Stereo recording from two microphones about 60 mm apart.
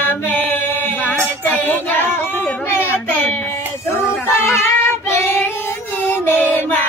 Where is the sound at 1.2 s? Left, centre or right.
Left.